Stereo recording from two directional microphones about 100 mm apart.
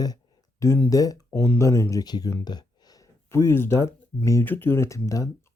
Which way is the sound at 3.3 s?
25° left (ahead or behind).